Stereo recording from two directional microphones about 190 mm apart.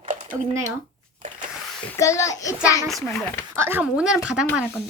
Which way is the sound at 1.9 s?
15° left (ahead or behind).